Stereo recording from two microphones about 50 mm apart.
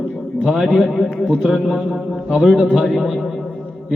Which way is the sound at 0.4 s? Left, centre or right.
Centre.